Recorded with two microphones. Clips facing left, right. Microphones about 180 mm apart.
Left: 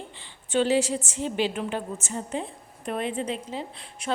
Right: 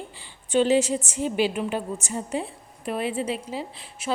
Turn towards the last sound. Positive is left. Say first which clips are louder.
# right 1 dB
turn(degrees=-5)  # may be behind; listen again after turning